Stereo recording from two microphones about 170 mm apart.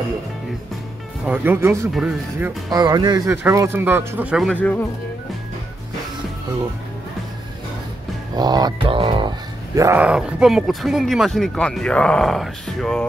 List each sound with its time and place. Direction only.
1.2 s speech: 10° right (ahead or behind)
2.7 s a sound: 25° right (ahead or behind)
3.4 s speech: 15° right (ahead or behind)
4.5 s speech: 10° left (ahead or behind)
8.4 s a sound: 25° right (ahead or behind)
9.8 s speech: 15° right (ahead or behind)